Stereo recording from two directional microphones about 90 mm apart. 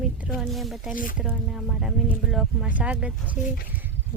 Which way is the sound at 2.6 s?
15° right (ahead or behind).